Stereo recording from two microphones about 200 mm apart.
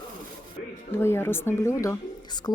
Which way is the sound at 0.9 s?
10° left (ahead or behind).